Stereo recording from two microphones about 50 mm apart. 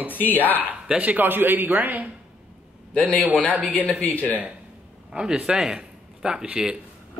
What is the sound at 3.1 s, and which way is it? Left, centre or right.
Speech, right.